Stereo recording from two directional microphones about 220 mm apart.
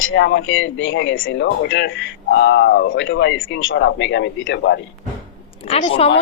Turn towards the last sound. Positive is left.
turn(degrees=25)  # may be behind; listen again after turning